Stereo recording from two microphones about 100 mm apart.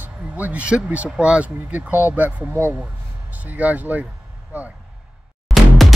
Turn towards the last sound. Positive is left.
turn(degrees=0)  # may be behind; listen again after turning